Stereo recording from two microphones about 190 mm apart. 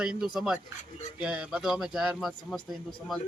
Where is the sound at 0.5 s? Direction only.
40° left (ahead or behind).